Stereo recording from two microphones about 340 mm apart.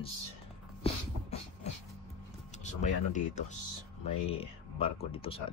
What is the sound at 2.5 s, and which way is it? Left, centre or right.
Speech, left.